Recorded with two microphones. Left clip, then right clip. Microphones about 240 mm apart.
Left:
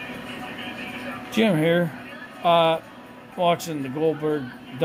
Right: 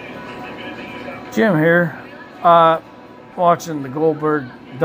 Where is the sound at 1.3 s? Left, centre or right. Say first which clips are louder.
Right 6 dB; centre.